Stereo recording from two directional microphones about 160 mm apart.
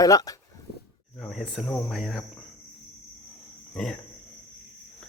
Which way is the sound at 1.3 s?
Centre (ahead or behind).